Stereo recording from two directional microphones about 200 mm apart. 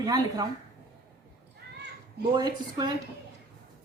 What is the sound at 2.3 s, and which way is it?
Speech, 20° right (ahead or behind).